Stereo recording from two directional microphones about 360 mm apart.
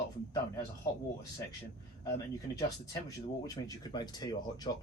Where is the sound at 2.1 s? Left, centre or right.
Centre.